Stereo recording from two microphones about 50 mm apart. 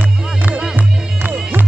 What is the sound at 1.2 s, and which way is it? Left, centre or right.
Music, right.